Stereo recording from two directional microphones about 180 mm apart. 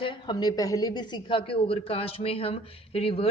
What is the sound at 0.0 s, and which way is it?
A woman's voice, 25° left (ahead or behind).